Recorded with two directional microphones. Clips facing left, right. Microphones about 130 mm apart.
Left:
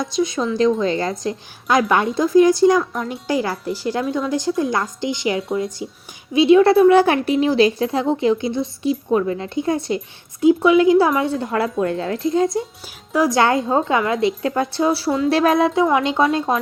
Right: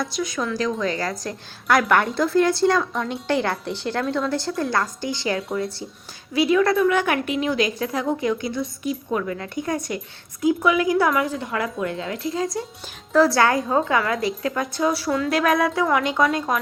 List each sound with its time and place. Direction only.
0.0 s a woman's voice: 25° left (ahead or behind)
6.3 s a woman's voice: 25° left (ahead or behind)
13.1 s a woman's voice: 15° left (ahead or behind)